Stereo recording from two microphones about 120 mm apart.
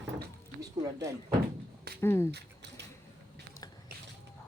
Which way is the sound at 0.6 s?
30° right (ahead or behind).